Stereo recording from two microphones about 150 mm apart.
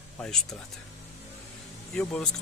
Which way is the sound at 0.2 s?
5° left (ahead or behind).